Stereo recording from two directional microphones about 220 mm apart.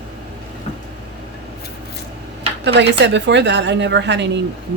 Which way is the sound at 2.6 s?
50° right (ahead or behind).